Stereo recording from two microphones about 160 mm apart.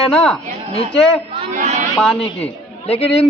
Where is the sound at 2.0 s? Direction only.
5° left (ahead or behind).